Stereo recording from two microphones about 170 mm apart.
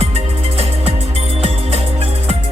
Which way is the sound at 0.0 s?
35° right (ahead or behind).